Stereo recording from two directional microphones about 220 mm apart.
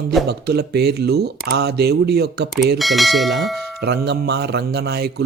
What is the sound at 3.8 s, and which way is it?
Speech, 50° right (ahead or behind).